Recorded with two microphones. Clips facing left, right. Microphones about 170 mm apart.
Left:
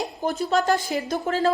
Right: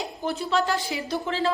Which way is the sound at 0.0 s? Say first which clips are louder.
Left 3 dB; 40° left (ahead or behind).